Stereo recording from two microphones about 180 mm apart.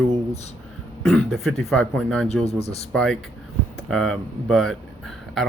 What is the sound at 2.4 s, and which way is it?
Speech, 35° left (ahead or behind).